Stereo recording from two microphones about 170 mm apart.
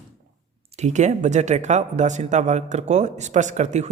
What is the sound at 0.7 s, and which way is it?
Speech, 45° right (ahead or behind).